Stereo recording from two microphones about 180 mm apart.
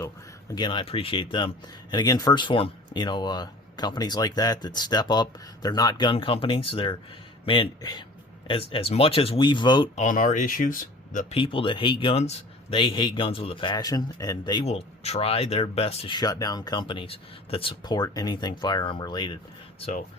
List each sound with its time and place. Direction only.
0.5 s a man's voice: 25° left (ahead or behind)
9.9 s speech: 45° left (ahead or behind)
11.3 s a man's voice: 30° left (ahead or behind)
14.7 s a man's voice: 35° left (ahead or behind)
19.8 s speech: 40° left (ahead or behind)